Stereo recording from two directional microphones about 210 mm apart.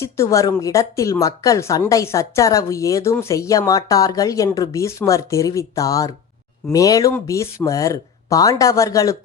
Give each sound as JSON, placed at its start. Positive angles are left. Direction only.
{"t": 0.0, "sound": "speech", "side_deg": 15}